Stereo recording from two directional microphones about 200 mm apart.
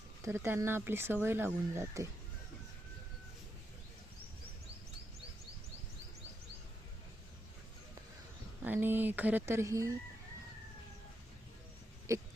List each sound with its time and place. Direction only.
0.2 s speech: 10° right (ahead or behind)
8.6 s speech: 10° right (ahead or behind)
12.1 s speech: 15° right (ahead or behind)